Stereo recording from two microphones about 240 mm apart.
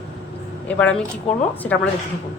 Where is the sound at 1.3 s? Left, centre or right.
Left.